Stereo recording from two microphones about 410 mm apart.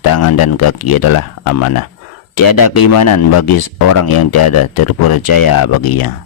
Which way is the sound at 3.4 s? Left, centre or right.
Left.